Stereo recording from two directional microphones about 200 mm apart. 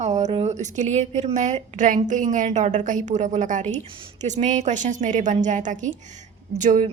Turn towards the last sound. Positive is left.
turn(degrees=-40)  # may be behind; listen again after turning